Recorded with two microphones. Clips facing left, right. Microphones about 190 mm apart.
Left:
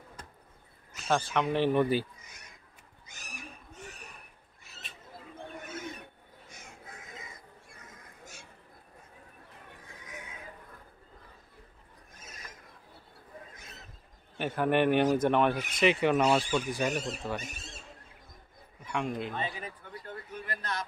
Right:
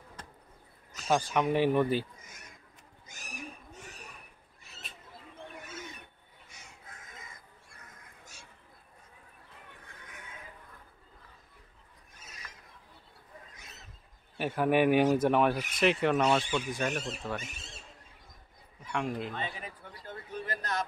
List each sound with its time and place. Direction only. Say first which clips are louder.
1.3 s speech: even; 10° right (ahead or behind)
9.9 s neigh: left 7 dB; 55° right (ahead or behind)
14.4 s speech: right 1 dB; 5° right (ahead or behind)
18.9 s a man's voice: even; centre (ahead or behind)
20.3 s a sound: right 3 dB; 40° right (ahead or behind)